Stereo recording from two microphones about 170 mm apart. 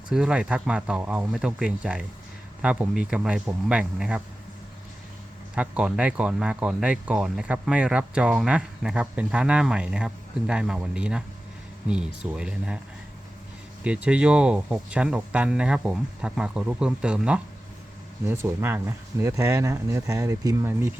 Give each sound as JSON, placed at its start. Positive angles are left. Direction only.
{"t": 0.1, "sound": "speech", "side_deg": -5}
{"t": 5.5, "sound": "speech", "side_deg": -5}
{"t": 13.8, "sound": "speech", "side_deg": -5}